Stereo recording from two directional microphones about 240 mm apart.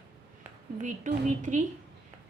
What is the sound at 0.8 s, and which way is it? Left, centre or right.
Speech, right.